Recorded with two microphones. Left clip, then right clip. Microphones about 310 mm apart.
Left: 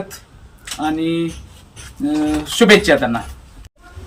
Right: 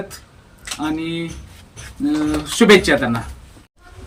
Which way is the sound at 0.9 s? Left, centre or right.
Centre.